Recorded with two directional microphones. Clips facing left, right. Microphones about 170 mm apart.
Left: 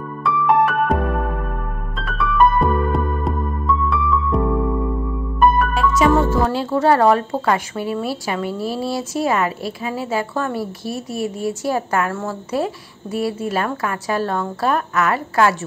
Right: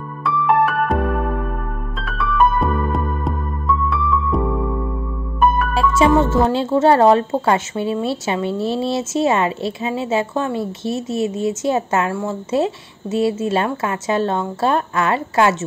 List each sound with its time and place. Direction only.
0.2 s music: centre (ahead or behind)
2.0 s music: centre (ahead or behind)
5.4 s music: centre (ahead or behind)
5.8 s music: 25° right (ahead or behind)
6.2 s a woman's voice: 25° right (ahead or behind)
12.1 s a woman's voice: 10° right (ahead or behind)
12.4 s a woman's voice: 25° right (ahead or behind)